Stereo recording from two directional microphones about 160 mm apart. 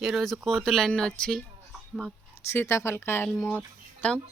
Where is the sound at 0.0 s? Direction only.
Centre (ahead or behind).